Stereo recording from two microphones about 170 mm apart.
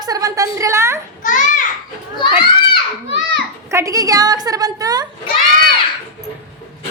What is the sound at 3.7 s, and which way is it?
A woman's voice, 15° right (ahead or behind).